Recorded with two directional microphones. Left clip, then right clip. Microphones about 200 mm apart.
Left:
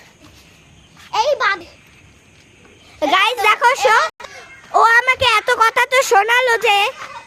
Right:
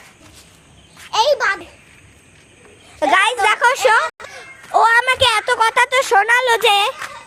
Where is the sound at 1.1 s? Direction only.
Centre (ahead or behind).